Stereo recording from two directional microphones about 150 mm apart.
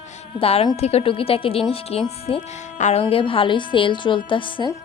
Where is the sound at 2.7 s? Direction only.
50° left (ahead or behind).